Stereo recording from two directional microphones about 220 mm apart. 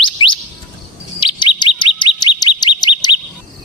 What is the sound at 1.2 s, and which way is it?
Bird, 20° left (ahead or behind).